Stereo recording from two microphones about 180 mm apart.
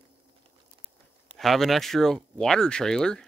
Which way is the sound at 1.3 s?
Centre (ahead or behind).